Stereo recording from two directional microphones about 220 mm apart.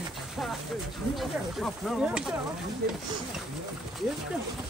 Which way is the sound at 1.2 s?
Centre (ahead or behind).